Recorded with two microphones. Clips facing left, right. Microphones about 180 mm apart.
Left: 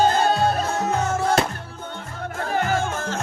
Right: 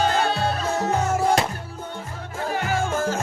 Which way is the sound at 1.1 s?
10° right (ahead or behind).